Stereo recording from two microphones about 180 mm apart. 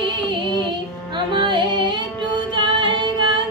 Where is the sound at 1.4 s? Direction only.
25° right (ahead or behind).